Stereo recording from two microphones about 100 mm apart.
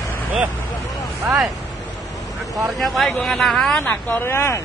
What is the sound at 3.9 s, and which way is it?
Speech, 20° left (ahead or behind).